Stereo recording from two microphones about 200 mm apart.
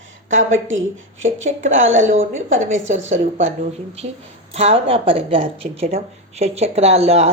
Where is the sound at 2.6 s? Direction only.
35° right (ahead or behind).